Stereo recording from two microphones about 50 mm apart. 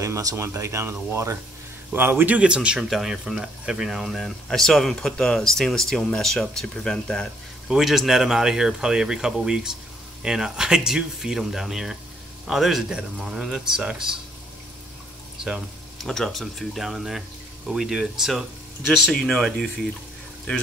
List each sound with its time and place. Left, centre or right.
0.0 s speech: right
1.1 s speech: right
2.0 s a man's voice: right
2.3 s speech: right
2.9 s speech: centre
3.9 s speech: centre
7.6 s speech: centre
16.0 s speech: centre
19.0 s speech: centre